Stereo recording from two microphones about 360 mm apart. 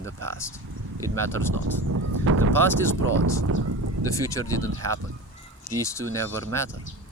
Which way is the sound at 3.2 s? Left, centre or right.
Right.